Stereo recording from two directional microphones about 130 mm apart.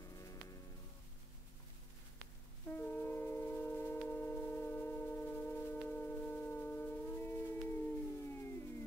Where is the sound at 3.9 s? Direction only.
15° left (ahead or behind).